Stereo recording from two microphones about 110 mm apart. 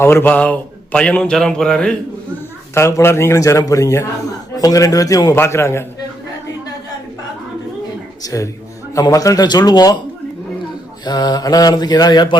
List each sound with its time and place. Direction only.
0.0 s a man's voice: 20° left (ahead or behind)
2.7 s speech: 25° left (ahead or behind)
4.5 s mantra: 35° left (ahead or behind)
8.2 s mantra: 30° left (ahead or behind)
11.0 s mantra: 40° left (ahead or behind)